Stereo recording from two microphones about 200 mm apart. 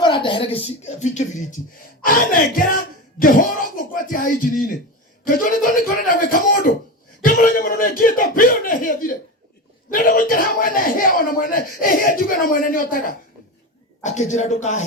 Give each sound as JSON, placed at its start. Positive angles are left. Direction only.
{"t": 0.0, "sound": "speech", "side_deg": 25}
{"t": 2.0, "sound": "music", "side_deg": 45}
{"t": 5.2, "sound": "a sound", "side_deg": 40}